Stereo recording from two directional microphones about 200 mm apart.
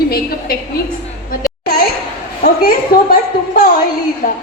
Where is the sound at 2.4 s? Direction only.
45° left (ahead or behind).